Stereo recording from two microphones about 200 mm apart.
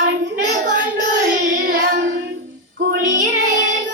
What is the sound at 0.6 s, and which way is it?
Child singing, 40° right (ahead or behind).